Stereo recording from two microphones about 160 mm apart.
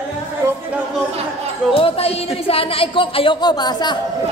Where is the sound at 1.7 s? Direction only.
35° left (ahead or behind).